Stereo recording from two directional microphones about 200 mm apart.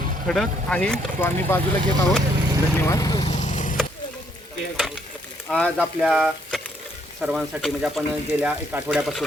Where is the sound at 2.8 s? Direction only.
15° left (ahead or behind).